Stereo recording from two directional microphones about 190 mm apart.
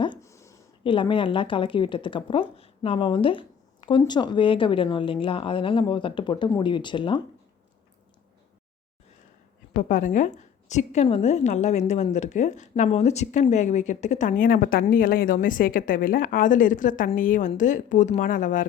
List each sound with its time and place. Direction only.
0.0 s a sound: 20° left (ahead or behind)
0.9 s a woman's voice: 25° left (ahead or behind)
9.9 s a woman's voice: 40° left (ahead or behind)